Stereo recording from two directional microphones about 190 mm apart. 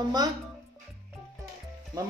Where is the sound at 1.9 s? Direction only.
20° right (ahead or behind).